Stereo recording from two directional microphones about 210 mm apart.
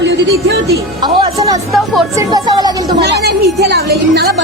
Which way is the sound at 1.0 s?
20° right (ahead or behind).